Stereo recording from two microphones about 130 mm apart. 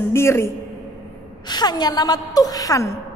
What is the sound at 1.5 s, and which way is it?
A woman's voice, 30° left (ahead or behind).